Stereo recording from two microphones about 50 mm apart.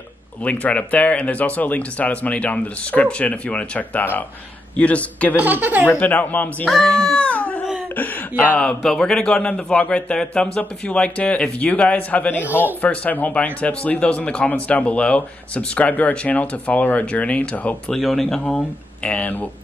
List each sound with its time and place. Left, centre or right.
0.4 s speech: left
5.3 s speech: right
5.9 s speech: left
6.8 s speech: centre
7.2 s dog: left
7.9 s speech: left
8.5 s speech: centre
17.9 s speech: centre
19.0 s speech: left